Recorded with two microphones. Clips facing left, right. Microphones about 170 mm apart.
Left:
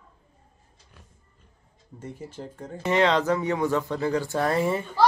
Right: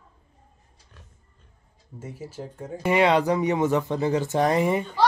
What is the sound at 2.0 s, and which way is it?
Speech, 5° right (ahead or behind).